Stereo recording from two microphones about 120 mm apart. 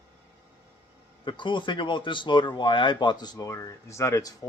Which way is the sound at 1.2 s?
40° left (ahead or behind).